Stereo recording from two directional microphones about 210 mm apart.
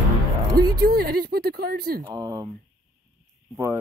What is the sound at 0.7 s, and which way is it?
Speech, 50° right (ahead or behind).